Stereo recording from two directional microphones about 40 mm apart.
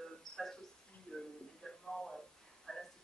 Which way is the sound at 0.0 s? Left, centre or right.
Centre.